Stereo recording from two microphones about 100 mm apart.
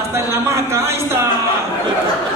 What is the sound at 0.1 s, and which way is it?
A man's voice, 25° right (ahead or behind).